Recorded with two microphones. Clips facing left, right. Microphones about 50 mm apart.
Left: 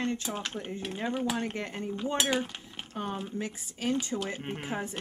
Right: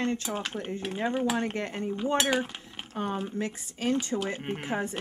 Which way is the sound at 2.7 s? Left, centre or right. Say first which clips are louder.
Right 1 dB; centre.